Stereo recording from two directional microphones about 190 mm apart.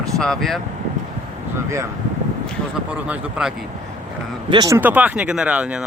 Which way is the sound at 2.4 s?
5° right (ahead or behind).